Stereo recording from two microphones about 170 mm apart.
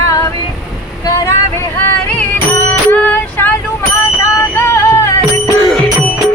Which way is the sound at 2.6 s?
10° left (ahead or behind).